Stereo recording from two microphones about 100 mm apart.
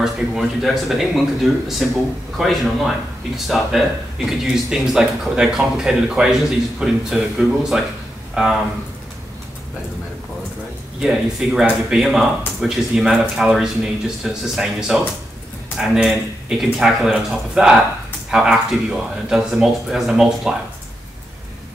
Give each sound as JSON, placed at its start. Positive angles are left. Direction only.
{"t": 0.0, "sound": "speech", "side_deg": 0}
{"t": 11.0, "sound": "speech", "side_deg": -5}